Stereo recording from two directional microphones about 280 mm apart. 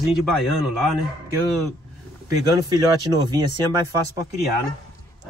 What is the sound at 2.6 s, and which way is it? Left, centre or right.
Speech, centre.